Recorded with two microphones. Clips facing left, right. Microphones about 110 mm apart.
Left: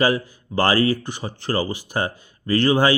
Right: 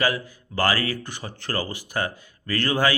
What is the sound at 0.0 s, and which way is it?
A man's voice, 25° left (ahead or behind).